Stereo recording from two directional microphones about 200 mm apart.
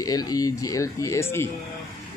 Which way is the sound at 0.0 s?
20° left (ahead or behind).